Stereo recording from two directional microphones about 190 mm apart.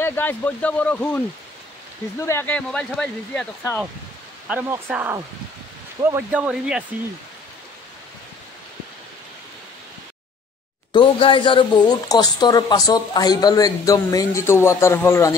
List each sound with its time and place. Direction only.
0.0 s speech: 10° left (ahead or behind)
4.5 s speech: 10° right (ahead or behind)
10.9 s speech: 25° left (ahead or behind)